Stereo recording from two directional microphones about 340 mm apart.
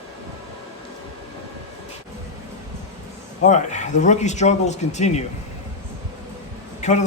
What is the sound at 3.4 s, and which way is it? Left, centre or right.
Speech, left.